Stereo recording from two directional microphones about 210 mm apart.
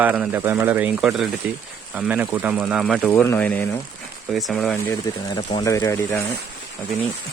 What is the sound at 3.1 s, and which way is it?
Speech, 10° left (ahead or behind).